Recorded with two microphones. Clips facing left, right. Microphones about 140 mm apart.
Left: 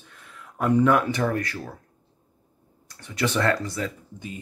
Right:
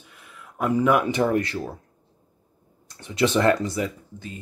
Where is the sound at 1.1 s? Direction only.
20° right (ahead or behind).